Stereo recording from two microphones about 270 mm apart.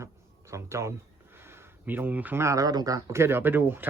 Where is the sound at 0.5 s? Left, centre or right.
Centre.